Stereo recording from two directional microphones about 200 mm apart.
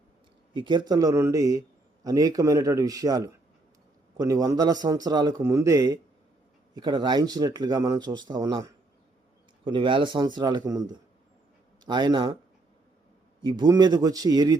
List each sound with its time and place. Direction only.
0.5 s a man's voice: 25° right (ahead or behind)
13.4 s speech: 20° right (ahead or behind)